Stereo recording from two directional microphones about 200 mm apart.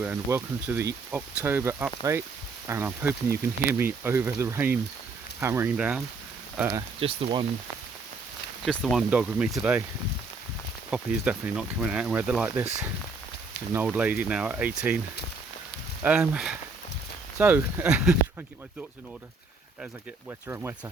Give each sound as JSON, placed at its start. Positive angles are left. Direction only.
{"t": 0.0, "sound": "speech", "side_deg": -10}
{"t": 7.0, "sound": "speech", "side_deg": -30}
{"t": 8.6, "sound": "speech", "side_deg": 0}
{"t": 10.9, "sound": "speech", "side_deg": -5}
{"t": 13.7, "sound": "speech", "side_deg": -5}
{"t": 16.0, "sound": "speech", "side_deg": -5}
{"t": 20.5, "sound": "speech", "side_deg": -10}